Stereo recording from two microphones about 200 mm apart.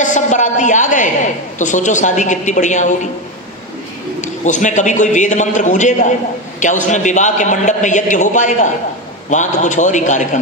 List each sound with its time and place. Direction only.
0.0 s a woman's voice: 35° left (ahead or behind)
4.2 s a man's voice: 40° left (ahead or behind)